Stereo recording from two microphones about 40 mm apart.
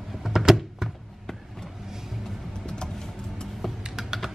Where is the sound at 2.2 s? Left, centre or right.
Centre.